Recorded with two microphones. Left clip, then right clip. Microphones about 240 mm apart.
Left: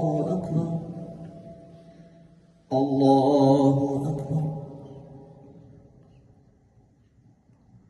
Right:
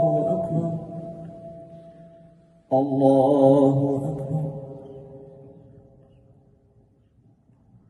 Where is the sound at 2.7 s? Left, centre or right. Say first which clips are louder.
Right 2 dB; right.